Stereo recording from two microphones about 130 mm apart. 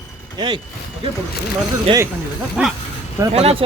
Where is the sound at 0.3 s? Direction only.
35° right (ahead or behind).